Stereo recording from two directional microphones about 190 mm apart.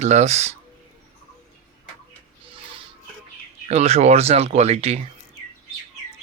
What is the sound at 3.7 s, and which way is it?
Speech, 35° right (ahead or behind).